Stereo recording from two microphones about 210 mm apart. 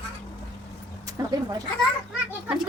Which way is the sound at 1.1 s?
15° right (ahead or behind).